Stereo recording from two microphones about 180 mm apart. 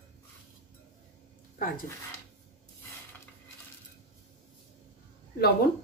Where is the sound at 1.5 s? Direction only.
50° left (ahead or behind).